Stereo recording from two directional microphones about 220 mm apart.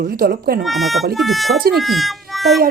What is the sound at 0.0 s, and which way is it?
Speech, 40° right (ahead or behind).